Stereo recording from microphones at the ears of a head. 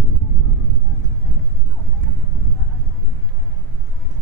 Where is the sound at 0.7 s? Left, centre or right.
Right.